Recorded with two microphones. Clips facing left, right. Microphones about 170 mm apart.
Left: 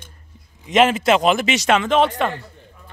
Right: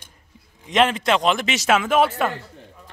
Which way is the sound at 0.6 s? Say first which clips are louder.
Left 4 dB; 5° left (ahead or behind).